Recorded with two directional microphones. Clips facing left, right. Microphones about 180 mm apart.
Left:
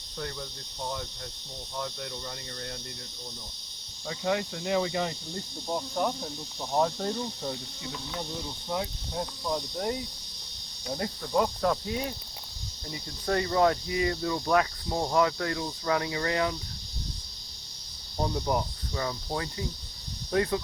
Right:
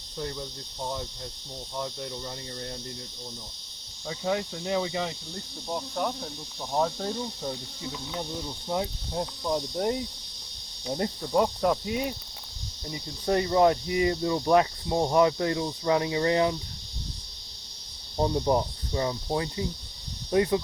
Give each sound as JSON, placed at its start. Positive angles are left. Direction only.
{"t": 0.2, "sound": "speech", "side_deg": -20}
{"t": 1.8, "sound": "speech", "side_deg": -20}
{"t": 4.1, "sound": "cricket", "side_deg": -5}
{"t": 4.8, "sound": "speech", "side_deg": 0}
{"t": 9.1, "sound": "cricket", "side_deg": -15}
{"t": 11.2, "sound": "cricket", "side_deg": -15}
{"t": 12.9, "sound": "speech", "side_deg": -20}
{"t": 18.2, "sound": "speech", "side_deg": -25}